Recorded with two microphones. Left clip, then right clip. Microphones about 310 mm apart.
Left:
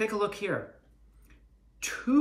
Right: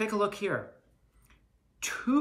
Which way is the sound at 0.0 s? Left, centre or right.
Centre.